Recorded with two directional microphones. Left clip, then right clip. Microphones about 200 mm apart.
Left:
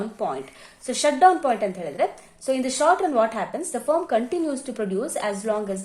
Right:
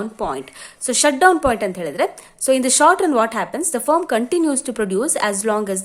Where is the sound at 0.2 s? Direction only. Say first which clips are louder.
Right 3 dB; 30° right (ahead or behind).